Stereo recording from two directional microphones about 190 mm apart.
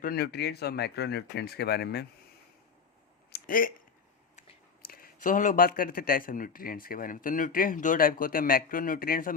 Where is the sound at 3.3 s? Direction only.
45° left (ahead or behind).